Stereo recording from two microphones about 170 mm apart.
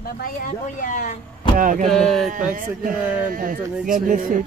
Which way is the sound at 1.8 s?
5° left (ahead or behind).